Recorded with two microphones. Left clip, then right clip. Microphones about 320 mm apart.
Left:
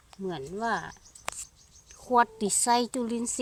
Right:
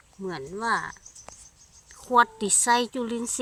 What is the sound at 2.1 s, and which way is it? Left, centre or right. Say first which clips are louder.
A woman's voice: right 3 dB; centre.